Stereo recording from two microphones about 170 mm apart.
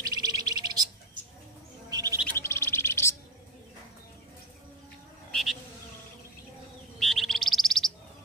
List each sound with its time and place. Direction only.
0.0 s bird: 20° right (ahead or behind)
1.9 s chirp: 20° right (ahead or behind)
2.2 s bird: 15° left (ahead or behind)
5.3 s insect: centre (ahead or behind)
7.0 s bird: centre (ahead or behind)